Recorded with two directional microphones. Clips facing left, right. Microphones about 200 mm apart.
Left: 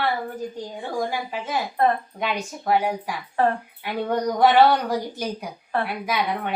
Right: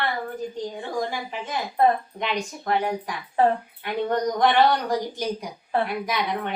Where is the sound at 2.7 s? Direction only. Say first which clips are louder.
Left 3 dB; 10° left (ahead or behind).